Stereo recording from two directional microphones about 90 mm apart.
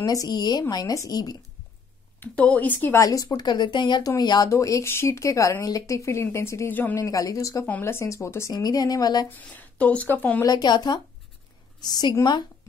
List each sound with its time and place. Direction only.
0.0 s a woman's voice: 45° left (ahead or behind)
2.1 s a woman's voice: 15° left (ahead or behind)
3.0 s speech: 40° left (ahead or behind)
3.3 s a woman's voice: 55° left (ahead or behind)
4.5 s speech: 35° left (ahead or behind)
6.7 s a woman's voice: 20° left (ahead or behind)
7.0 s speech: 40° left (ahead or behind)
8.5 s a woman's voice: 50° left (ahead or behind)
9.4 s speech: 15° left (ahead or behind)
10.4 s a woman's voice: 50° left (ahead or behind)